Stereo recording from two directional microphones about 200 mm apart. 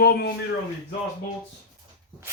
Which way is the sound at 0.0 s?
55° left (ahead or behind).